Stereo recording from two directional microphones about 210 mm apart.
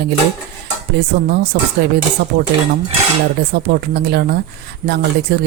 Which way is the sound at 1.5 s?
50° right (ahead or behind).